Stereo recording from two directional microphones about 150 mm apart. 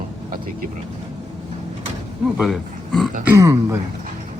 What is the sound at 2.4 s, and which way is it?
Speech, centre (ahead or behind).